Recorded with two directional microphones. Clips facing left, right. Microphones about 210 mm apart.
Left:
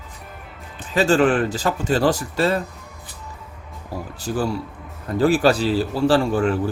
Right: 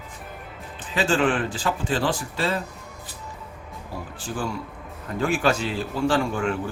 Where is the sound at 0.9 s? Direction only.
40° left (ahead or behind).